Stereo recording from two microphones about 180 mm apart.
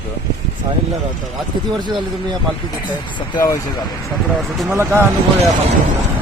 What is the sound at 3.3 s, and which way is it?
Speech, 15° left (ahead or behind).